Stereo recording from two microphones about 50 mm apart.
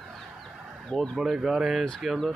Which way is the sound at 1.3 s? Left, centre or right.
Centre.